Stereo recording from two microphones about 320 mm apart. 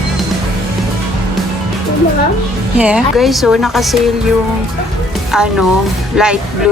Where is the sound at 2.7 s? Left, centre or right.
Centre.